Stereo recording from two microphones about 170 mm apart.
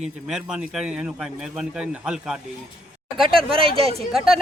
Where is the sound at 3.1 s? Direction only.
30° right (ahead or behind).